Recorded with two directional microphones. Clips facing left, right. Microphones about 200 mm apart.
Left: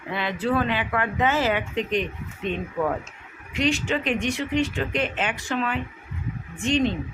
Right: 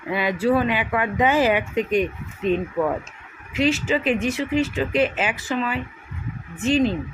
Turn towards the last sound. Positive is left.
turn(degrees=-5)  # may be behind; listen again after turning